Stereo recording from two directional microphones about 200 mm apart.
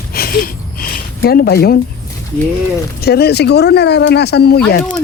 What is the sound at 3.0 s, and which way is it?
Speech, 55° left (ahead or behind).